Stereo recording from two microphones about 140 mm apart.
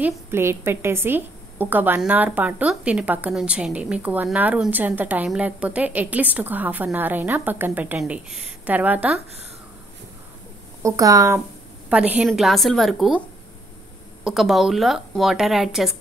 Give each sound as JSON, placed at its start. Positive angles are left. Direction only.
{"t": 0.0, "sound": "a woman's voice", "side_deg": -15}
{"t": 10.8, "sound": "speech", "side_deg": -25}
{"t": 11.9, "sound": "a woman's voice", "side_deg": -10}
{"t": 14.2, "sound": "speech", "side_deg": 0}